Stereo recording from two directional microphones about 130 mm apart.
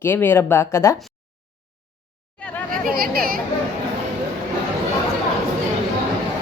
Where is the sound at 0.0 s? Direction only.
15° left (ahead or behind).